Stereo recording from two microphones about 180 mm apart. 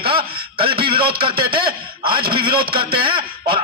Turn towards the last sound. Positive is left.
turn(degrees=-30)  # may be behind; listen again after turning